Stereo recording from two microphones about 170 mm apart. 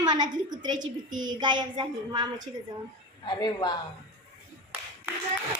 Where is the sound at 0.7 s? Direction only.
50° right (ahead or behind).